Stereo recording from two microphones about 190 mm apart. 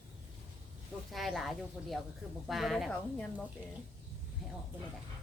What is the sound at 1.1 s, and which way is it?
Speech, centre (ahead or behind).